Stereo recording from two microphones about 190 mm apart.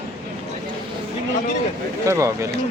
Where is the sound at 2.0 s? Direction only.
15° right (ahead or behind).